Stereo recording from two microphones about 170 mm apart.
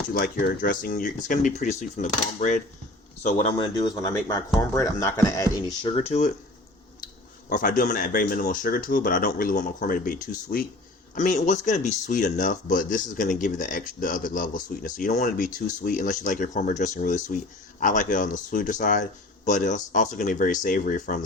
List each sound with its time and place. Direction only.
0.1 s speech: 60° left (ahead or behind)
3.6 s speech: 25° left (ahead or behind)
6.0 s speech: 40° left (ahead or behind)
7.5 s speech: 55° left (ahead or behind)